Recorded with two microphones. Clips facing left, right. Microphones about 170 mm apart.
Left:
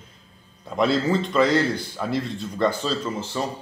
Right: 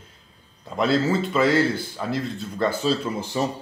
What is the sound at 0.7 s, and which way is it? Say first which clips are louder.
A man's voice: even; centre (ahead or behind).